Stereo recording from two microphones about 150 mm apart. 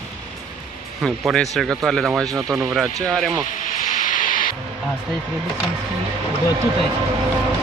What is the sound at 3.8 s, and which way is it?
Music, 60° left (ahead or behind).